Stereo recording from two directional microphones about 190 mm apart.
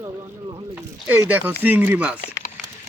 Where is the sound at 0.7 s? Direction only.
10° right (ahead or behind).